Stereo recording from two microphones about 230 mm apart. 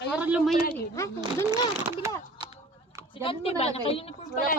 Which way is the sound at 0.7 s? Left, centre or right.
Centre.